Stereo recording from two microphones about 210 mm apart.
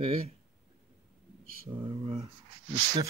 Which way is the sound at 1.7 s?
25° right (ahead or behind).